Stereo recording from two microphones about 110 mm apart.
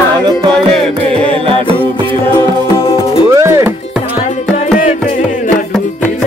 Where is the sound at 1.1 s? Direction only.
55° right (ahead or behind).